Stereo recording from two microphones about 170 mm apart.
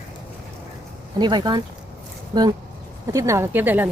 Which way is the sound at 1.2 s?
25° right (ahead or behind).